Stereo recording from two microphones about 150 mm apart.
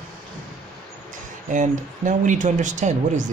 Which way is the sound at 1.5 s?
55° right (ahead or behind).